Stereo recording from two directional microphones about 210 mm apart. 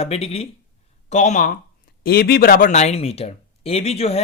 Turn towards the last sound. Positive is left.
turn(degrees=30)  # may be behind; listen again after turning